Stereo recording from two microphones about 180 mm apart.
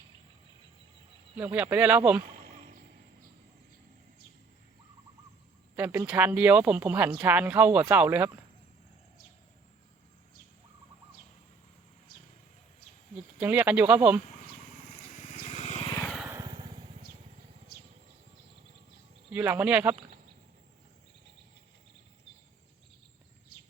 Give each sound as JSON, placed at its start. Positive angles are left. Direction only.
{"t": 1.4, "sound": "speech", "side_deg": -10}
{"t": 2.2, "sound": "a sound", "side_deg": -45}
{"t": 5.7, "sound": "speech", "side_deg": -10}
{"t": 13.4, "sound": "speech", "side_deg": -10}
{"t": 14.3, "sound": "vehicle", "side_deg": 45}
{"t": 16.0, "sound": "vehicle", "side_deg": 0}
{"t": 16.3, "sound": "lawn mower", "side_deg": -20}
{"t": 19.3, "sound": "speech", "side_deg": -10}